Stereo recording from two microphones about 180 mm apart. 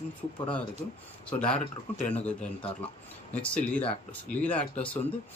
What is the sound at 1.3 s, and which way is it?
A man's voice, 5° left (ahead or behind).